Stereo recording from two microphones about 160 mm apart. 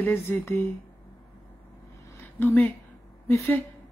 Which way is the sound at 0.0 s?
15° left (ahead or behind).